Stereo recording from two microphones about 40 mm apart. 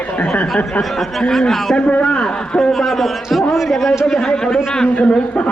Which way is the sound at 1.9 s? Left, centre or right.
Left.